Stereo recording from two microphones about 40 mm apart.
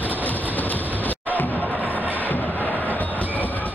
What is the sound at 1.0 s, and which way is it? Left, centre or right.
Music, left.